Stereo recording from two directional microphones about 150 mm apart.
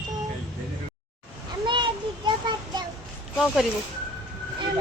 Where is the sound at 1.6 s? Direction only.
30° right (ahead or behind).